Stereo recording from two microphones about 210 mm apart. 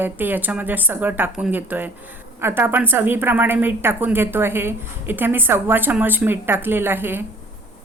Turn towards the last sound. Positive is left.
turn(degrees=-10)  # may be behind; listen again after turning